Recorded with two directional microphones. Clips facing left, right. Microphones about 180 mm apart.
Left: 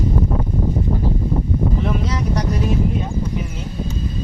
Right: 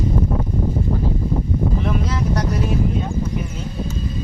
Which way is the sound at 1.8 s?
Centre (ahead or behind).